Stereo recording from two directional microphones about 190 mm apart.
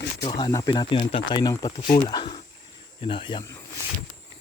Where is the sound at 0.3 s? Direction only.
30° left (ahead or behind).